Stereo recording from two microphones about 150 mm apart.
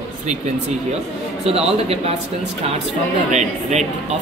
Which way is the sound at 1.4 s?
40° right (ahead or behind).